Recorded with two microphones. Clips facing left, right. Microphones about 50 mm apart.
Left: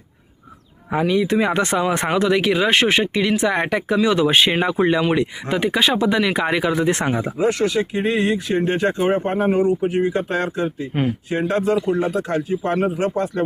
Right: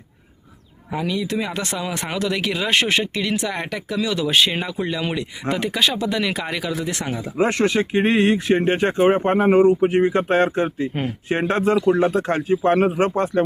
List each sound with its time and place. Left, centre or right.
0.9 s speech: left
5.5 s speech: centre; by 7.3 s left
7.3 s speech: right